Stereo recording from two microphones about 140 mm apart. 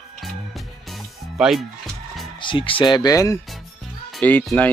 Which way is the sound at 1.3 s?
5° right (ahead or behind).